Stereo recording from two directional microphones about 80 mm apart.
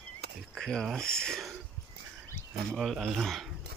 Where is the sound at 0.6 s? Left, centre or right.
Centre.